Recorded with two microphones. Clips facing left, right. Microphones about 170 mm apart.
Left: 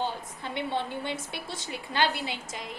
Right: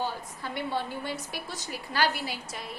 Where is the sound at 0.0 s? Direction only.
20° left (ahead or behind).